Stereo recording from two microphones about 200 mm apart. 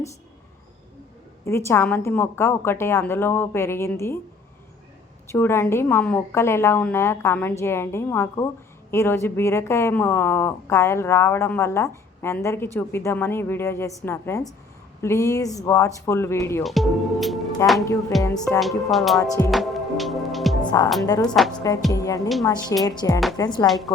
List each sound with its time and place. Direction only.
1.5 s a woman's voice: 15° left (ahead or behind)
5.3 s a woman's voice: 10° left (ahead or behind)
16.6 s music: centre (ahead or behind)
17.6 s a woman's voice: 15° left (ahead or behind)
18.1 s music: centre (ahead or behind)
20.6 s music: 20° left (ahead or behind)
21.0 s speech: 20° left (ahead or behind)
21.3 s music: centre (ahead or behind)
21.9 s a woman's voice: 15° left (ahead or behind)
23.6 s music: centre (ahead or behind)